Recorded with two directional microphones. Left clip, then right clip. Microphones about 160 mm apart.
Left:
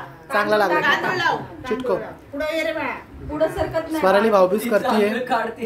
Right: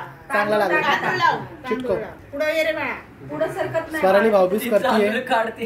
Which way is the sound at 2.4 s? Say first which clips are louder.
Right 2 dB; 45° right (ahead or behind).